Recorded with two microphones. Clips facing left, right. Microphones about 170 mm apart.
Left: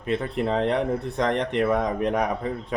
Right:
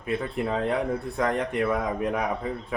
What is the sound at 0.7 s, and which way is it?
Speech, 5° right (ahead or behind).